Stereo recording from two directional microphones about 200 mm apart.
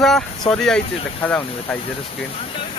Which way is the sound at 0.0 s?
Centre (ahead or behind).